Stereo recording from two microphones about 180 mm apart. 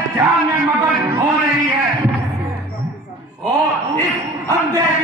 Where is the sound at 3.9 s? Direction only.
10° left (ahead or behind).